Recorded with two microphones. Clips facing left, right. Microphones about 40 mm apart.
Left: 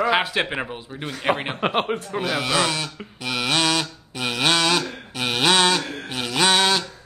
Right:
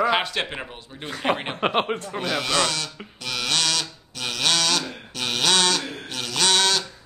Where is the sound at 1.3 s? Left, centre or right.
Centre.